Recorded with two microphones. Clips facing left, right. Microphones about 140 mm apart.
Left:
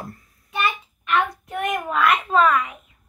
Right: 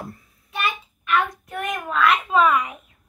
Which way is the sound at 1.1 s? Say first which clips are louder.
Even; 20° left (ahead or behind).